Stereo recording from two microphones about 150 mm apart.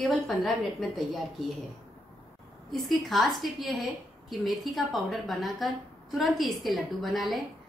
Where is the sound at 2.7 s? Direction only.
Centre (ahead or behind).